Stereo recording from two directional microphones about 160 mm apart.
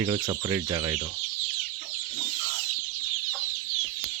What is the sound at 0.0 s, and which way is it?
Speech, 25° right (ahead or behind).